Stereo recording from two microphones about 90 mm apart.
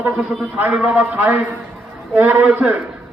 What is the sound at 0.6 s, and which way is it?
A man's voice, 15° right (ahead or behind).